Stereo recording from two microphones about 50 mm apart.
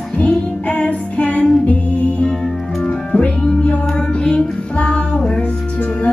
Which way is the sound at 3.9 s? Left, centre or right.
Centre.